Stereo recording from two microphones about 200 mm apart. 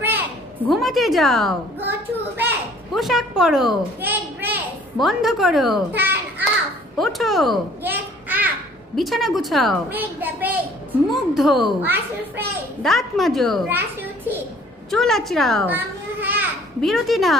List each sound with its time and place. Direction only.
0.0 s a sound: 10° right (ahead or behind)
2.9 s a woman's voice: centre (ahead or behind)
13.7 s a child's voice: 10° right (ahead or behind)
14.9 s a child's voice: centre (ahead or behind)
15.7 s children playing: 10° right (ahead or behind)